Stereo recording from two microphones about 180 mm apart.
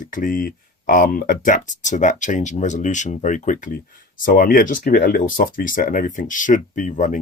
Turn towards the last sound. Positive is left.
turn(degrees=45)  # may be behind; listen again after turning